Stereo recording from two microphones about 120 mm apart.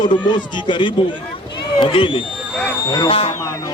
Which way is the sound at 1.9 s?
45° left (ahead or behind).